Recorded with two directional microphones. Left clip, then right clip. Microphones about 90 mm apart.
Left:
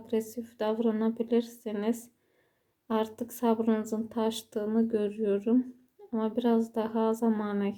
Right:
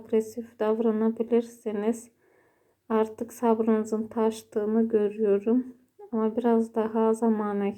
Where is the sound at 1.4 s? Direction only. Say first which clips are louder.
Right 4 dB; 20° left (ahead or behind).